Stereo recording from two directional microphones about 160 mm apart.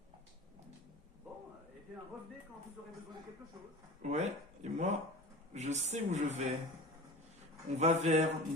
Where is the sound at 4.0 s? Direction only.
45° right (ahead or behind).